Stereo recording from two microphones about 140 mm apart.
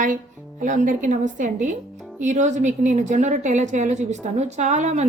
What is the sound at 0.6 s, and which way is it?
A woman's voice, 65° right (ahead or behind).